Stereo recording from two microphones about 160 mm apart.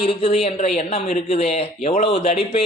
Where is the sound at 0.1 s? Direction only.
35° left (ahead or behind).